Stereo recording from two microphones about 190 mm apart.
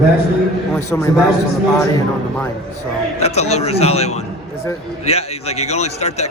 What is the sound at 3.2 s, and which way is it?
A man's voice, 35° left (ahead or behind).